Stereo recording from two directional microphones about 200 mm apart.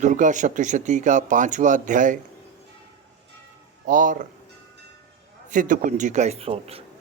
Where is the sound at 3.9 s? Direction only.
40° right (ahead or behind).